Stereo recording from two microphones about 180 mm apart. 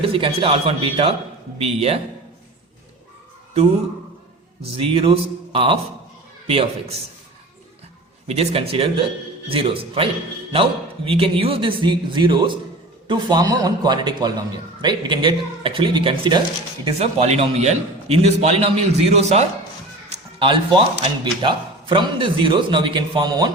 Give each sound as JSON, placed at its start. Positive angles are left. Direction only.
{"t": 0.0, "sound": "a man's voice", "side_deg": -30}
{"t": 4.8, "sound": "a man's voice", "side_deg": -30}
{"t": 8.3, "sound": "a man's voice", "side_deg": -35}